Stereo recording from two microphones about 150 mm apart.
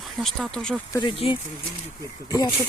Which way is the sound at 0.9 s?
30° left (ahead or behind).